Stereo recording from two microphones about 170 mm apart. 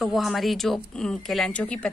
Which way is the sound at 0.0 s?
Centre (ahead or behind).